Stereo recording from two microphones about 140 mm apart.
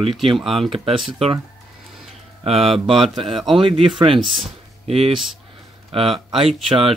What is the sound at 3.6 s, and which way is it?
Speech, 40° right (ahead or behind).